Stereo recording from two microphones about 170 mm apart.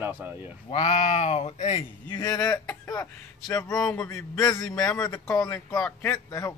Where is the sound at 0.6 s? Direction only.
45° left (ahead or behind).